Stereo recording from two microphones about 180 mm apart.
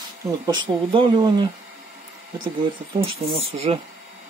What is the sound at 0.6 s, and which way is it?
Speech, 25° right (ahead or behind).